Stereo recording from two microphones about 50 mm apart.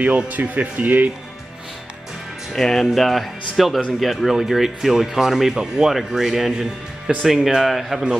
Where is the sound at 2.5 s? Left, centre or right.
Centre.